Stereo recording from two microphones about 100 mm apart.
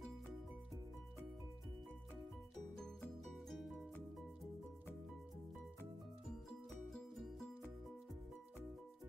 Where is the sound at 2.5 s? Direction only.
5° left (ahead or behind).